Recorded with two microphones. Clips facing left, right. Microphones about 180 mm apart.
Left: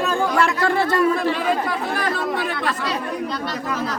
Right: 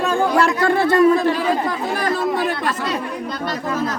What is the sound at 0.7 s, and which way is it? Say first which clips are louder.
Speech: right 4 dB; 50° right (ahead or behind).